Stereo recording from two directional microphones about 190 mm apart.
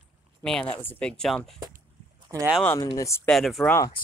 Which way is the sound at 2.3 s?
10° right (ahead or behind).